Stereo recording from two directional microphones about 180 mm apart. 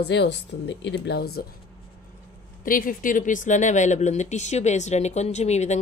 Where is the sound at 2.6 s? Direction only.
50° left (ahead or behind).